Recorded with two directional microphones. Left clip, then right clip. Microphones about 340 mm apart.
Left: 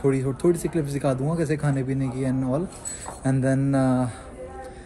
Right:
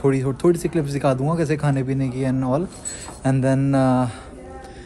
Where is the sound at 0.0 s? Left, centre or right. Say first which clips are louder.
Right 3 dB; centre.